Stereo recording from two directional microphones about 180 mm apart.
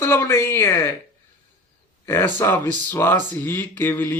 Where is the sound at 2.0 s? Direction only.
10° left (ahead or behind).